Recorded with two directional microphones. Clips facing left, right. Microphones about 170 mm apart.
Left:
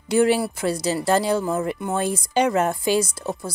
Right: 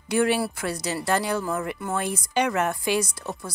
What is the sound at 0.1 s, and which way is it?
Speech, 25° left (ahead or behind).